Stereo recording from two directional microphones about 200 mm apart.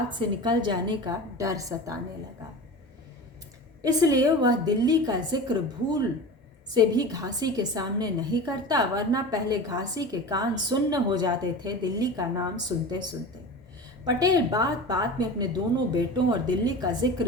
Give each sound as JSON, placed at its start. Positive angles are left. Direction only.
{"t": 0.4, "sound": "a woman's voice", "side_deg": -20}
{"t": 3.8, "sound": "a woman's voice", "side_deg": -20}